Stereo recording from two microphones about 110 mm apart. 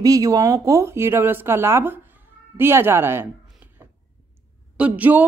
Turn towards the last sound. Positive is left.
turn(degrees=-15)  # may be behind; listen again after turning